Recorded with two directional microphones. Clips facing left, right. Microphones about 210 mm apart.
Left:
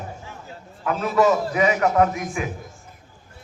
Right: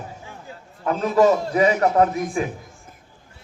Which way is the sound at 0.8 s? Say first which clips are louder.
Right 2 dB; 35° right (ahead or behind).